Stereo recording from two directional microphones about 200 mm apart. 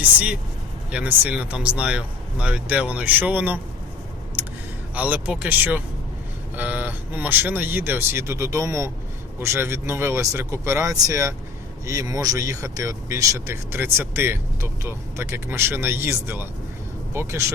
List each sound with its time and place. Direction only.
0.0 s speech: 5° right (ahead or behind)
4.9 s speech: 5° right (ahead or behind)